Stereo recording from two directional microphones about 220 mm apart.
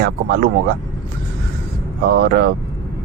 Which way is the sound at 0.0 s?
45° right (ahead or behind).